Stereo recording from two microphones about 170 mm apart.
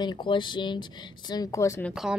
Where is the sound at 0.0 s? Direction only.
30° left (ahead or behind).